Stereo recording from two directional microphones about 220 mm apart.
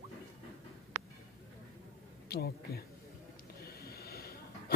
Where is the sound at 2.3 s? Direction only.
45° left (ahead or behind).